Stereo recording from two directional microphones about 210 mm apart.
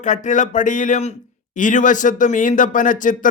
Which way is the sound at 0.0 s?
35° left (ahead or behind).